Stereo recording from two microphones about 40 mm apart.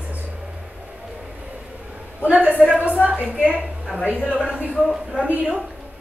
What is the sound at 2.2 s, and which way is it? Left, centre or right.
Speech, right.